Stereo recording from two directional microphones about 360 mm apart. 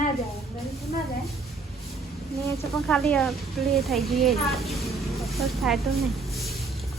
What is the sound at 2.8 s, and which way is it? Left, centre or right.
Speech, centre.